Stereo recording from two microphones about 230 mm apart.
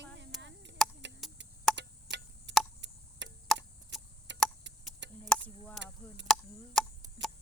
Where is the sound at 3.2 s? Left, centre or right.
Right.